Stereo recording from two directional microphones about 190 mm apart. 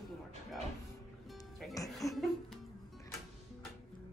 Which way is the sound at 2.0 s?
15° left (ahead or behind).